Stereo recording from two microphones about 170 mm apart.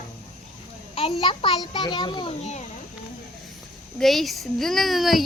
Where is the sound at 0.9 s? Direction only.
35° left (ahead or behind).